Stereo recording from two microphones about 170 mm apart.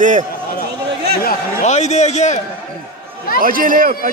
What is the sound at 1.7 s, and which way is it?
Speech, 40° left (ahead or behind).